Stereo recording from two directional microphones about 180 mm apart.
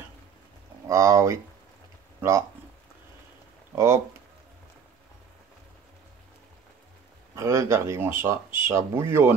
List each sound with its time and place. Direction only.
0.8 s speech: 15° right (ahead or behind)
3.7 s speech: 15° right (ahead or behind)
7.3 s speech: 15° right (ahead or behind)